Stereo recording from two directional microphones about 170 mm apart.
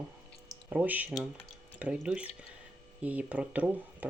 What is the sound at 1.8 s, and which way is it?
Speech, 5° right (ahead or behind).